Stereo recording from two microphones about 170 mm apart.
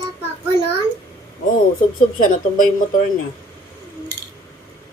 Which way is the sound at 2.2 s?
50° left (ahead or behind).